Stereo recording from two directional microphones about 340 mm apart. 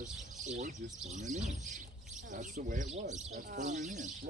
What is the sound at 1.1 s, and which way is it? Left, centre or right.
Speech, right.